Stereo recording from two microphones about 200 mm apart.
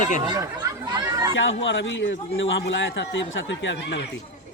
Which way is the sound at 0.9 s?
20° right (ahead or behind).